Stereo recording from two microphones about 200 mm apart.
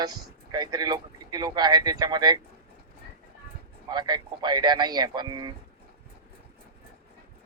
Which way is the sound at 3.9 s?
20° right (ahead or behind).